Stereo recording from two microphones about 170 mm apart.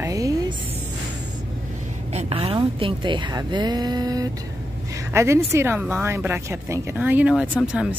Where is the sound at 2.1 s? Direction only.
35° right (ahead or behind).